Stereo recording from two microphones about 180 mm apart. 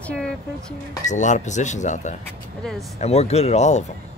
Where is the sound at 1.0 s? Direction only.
40° left (ahead or behind).